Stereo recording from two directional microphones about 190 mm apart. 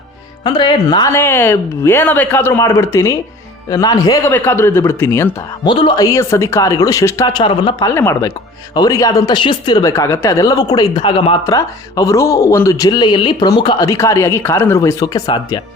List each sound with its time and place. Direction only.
0.4 s speech: 20° left (ahead or behind)
5.6 s speech: 25° left (ahead or behind)
11.4 s speech: 15° left (ahead or behind)